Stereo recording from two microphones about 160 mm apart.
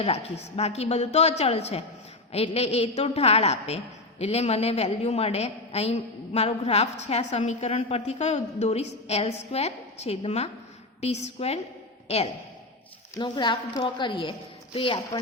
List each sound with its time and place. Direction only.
0.0 s a woman's voice: 40° left (ahead or behind)
13.1 s a woman's voice: 25° left (ahead or behind)